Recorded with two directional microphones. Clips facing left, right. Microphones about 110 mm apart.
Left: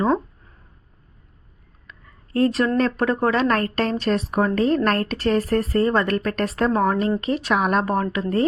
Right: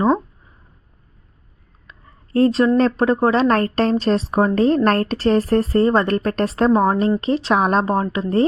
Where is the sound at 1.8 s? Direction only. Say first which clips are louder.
Right 1 dB; 30° right (ahead or behind).